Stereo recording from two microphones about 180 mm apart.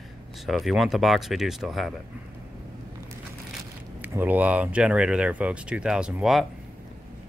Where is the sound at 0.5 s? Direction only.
Centre (ahead or behind).